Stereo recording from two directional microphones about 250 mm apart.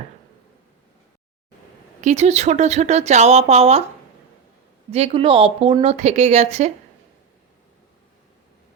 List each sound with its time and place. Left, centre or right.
2.0 s speech: right
4.9 s speech: right